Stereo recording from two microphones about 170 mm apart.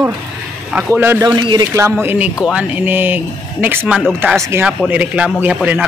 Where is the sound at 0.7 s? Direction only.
10° right (ahead or behind).